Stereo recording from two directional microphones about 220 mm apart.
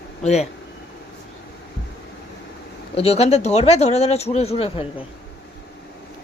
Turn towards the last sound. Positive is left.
turn(degrees=25)  # may be behind; listen again after turning